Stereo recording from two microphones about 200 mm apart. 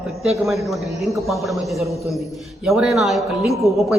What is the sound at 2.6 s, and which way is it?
A man's voice, centre (ahead or behind).